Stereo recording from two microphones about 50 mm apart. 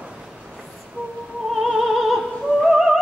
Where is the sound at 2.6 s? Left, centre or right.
Centre.